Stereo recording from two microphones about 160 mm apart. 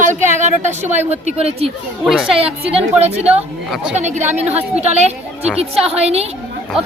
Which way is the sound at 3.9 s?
45° right (ahead or behind).